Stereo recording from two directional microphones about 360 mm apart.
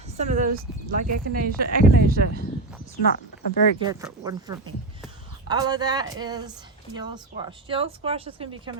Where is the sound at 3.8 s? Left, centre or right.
Centre.